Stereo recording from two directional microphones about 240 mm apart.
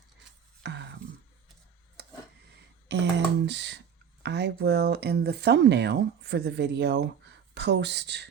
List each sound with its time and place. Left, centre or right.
0.6 s music: right
2.0 s a sound: right
2.9 s speech: right